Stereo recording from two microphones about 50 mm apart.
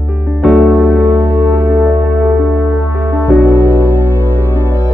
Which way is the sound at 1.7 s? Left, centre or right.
Right.